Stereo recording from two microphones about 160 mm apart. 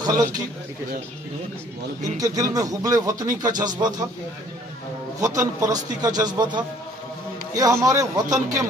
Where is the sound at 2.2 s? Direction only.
20° right (ahead or behind).